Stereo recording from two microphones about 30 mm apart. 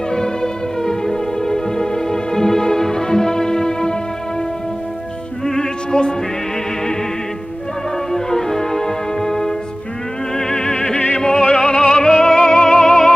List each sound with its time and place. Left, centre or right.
0.1 s music: left
5.4 s music: centre
8.1 s music: centre
10.3 s opera: centre
11.5 s music: left